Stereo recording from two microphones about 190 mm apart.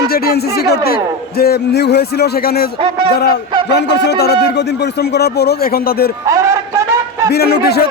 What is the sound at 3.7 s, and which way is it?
A man's voice, 65° left (ahead or behind).